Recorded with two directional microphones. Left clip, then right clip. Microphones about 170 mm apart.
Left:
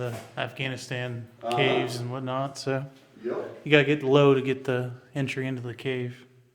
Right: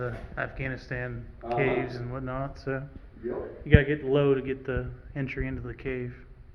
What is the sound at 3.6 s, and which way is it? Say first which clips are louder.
A man's voice: left 4 dB; 70° left (ahead or behind).